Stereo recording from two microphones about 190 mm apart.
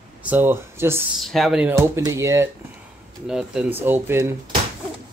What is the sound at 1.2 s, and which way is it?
Speech, centre (ahead or behind).